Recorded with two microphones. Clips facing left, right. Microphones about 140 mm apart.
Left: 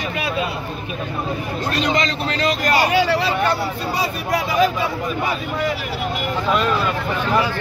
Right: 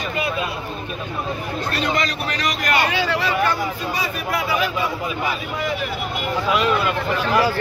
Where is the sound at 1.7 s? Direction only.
20° left (ahead or behind); by 4.7 s 35° left (ahead or behind).